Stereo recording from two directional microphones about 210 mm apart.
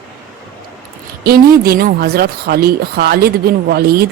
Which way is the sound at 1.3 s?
45° right (ahead or behind).